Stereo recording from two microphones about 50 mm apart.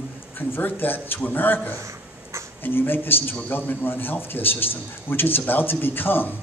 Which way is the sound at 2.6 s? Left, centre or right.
Left.